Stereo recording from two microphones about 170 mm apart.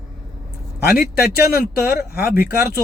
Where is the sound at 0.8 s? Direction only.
65° left (ahead or behind).